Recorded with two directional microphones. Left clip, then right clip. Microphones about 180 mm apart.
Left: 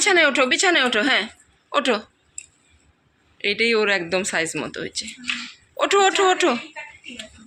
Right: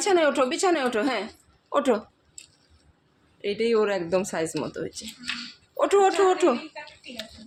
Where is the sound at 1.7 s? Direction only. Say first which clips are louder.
Left 2 dB; 15° right (ahead or behind).